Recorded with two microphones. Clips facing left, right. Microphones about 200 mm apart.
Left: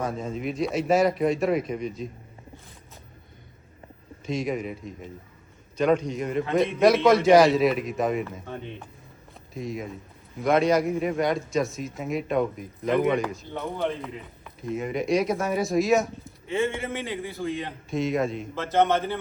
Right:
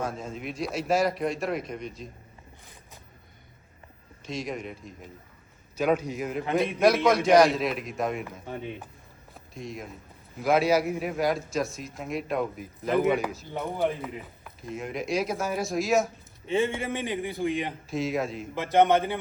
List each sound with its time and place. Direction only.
0.0 s a man's voice: centre (ahead or behind)
4.3 s a man's voice: centre (ahead or behind)
8.4 s a man's voice: 10° right (ahead or behind)
9.6 s a man's voice: centre (ahead or behind)
16.5 s a man's voice: 15° right (ahead or behind)
17.9 s a man's voice: centre (ahead or behind)
18.5 s a man's voice: 15° right (ahead or behind)